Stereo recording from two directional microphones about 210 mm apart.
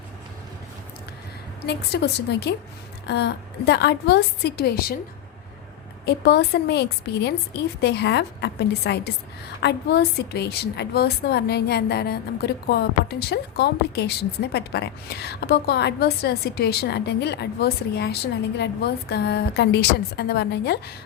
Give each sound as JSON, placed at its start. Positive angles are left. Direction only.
{"t": 1.6, "sound": "a woman's voice", "side_deg": 55}
{"t": 6.1, "sound": "a woman's voice", "side_deg": 50}